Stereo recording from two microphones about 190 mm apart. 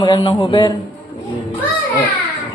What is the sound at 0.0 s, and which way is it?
Speech, 25° left (ahead or behind).